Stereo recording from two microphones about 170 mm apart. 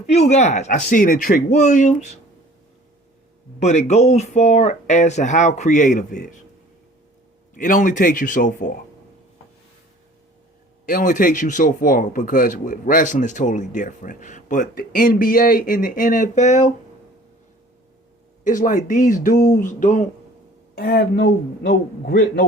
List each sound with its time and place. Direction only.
0.0 s speech: 40° left (ahead or behind)
3.6 s speech: 45° left (ahead or behind)
7.5 s speech: 50° left (ahead or behind)
10.8 s speech: 55° left (ahead or behind)
18.4 s speech: 50° left (ahead or behind)
20.7 s a man's voice: 65° left (ahead or behind)